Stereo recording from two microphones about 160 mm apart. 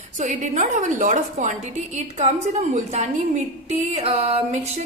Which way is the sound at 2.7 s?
45° right (ahead or behind).